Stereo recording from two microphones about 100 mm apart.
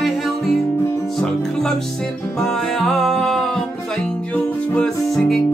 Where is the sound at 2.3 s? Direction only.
5° left (ahead or behind).